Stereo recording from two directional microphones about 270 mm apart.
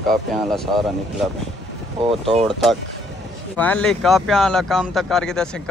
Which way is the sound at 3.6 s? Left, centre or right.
Centre.